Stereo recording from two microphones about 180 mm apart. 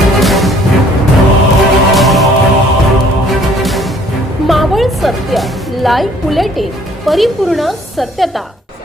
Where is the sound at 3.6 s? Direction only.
Centre (ahead or behind).